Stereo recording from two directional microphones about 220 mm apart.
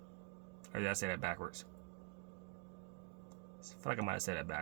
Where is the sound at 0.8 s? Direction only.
55° right (ahead or behind).